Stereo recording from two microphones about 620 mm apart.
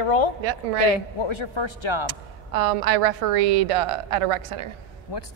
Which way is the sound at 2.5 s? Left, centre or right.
Right.